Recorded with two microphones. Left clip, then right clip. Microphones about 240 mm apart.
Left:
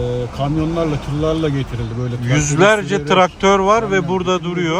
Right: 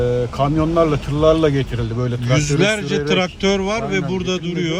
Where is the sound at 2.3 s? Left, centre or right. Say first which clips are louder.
Left 5 dB; centre.